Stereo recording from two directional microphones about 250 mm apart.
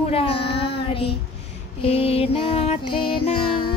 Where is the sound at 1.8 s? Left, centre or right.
Left.